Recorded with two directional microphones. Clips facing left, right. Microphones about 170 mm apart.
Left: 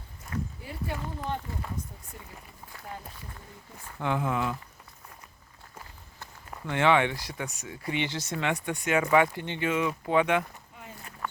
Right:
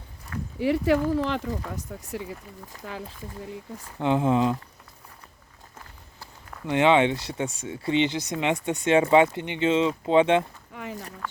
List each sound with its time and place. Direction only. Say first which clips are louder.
0.6 s speech: right 15 dB; 90° right
3.9 s speech: right 7 dB; 20° right (ahead or behind)
6.7 s speech: right 4 dB; 20° right (ahead or behind)
10.8 s a sound: right 12 dB; 80° right